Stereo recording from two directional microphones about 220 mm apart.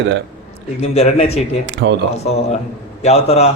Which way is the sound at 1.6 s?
50° right (ahead or behind).